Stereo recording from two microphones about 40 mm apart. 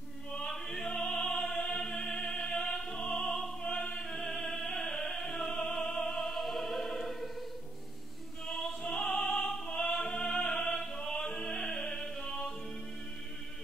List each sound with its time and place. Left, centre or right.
0.5 s opera: centre
3.7 s opera: left
4.0 s opera: centre
4.4 s music: centre
6.0 s opera: centre
8.9 s opera: centre